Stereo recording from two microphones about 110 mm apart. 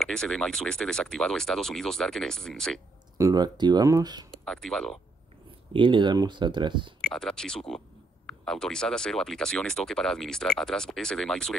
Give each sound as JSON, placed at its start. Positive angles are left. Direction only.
{"t": 0.0, "sound": "speech", "side_deg": 5}
{"t": 3.2, "sound": "speech", "side_deg": -35}
{"t": 4.3, "sound": "speech", "side_deg": 5}
{"t": 5.7, "sound": "speech", "side_deg": -50}
{"t": 7.0, "sound": "speech", "side_deg": 5}